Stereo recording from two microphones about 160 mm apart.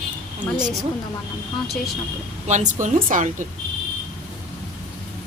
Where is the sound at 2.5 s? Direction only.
50° right (ahead or behind).